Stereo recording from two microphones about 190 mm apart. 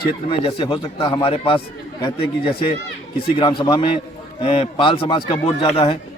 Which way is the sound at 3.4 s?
25° left (ahead or behind).